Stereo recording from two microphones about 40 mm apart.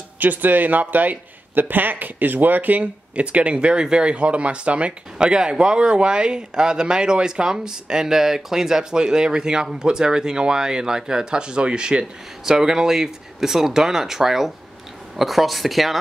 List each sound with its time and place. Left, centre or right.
0.2 s speech: right
5.3 s speech: centre